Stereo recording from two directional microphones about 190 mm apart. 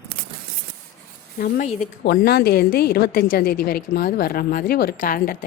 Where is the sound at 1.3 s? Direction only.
50° left (ahead or behind).